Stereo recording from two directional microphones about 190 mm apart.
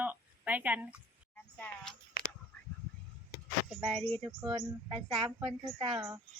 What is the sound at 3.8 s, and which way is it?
Speech, centre (ahead or behind).